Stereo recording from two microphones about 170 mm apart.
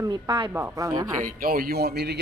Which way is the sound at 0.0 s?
25° right (ahead or behind).